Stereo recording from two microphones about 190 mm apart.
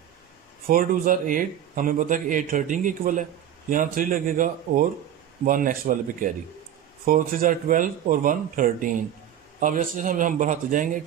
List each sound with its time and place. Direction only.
0.7 s a man's voice: 45° right (ahead or behind)